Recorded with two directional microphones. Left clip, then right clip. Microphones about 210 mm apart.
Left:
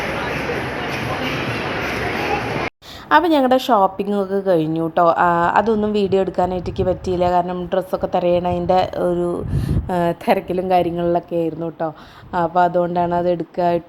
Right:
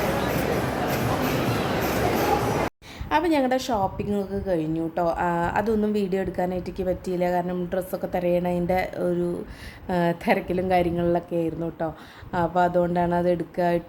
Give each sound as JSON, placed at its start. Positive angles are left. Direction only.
{"t": 3.1, "sound": "a woman's voice", "side_deg": 15}